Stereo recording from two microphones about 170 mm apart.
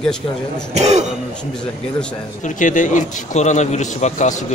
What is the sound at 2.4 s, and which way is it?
A man's voice, 45° left (ahead or behind).